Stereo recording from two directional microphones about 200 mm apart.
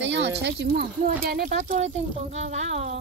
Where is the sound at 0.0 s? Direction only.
65° right (ahead or behind); by 1.8 s 45° right (ahead or behind).